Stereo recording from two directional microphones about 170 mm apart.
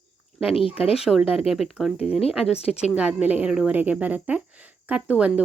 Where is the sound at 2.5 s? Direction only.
40° left (ahead or behind).